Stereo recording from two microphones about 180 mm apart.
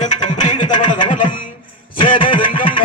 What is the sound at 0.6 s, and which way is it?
Chuckle, 25° left (ahead or behind).